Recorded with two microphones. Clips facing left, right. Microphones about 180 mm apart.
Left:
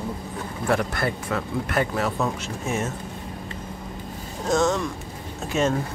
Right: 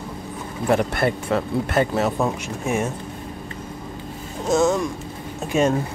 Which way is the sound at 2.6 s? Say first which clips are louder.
Right 4 dB; 10° right (ahead or behind).